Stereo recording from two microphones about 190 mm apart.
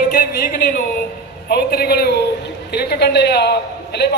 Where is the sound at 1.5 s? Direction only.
55° left (ahead or behind).